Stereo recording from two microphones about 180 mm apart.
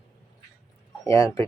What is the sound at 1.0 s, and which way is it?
Speech, 15° left (ahead or behind).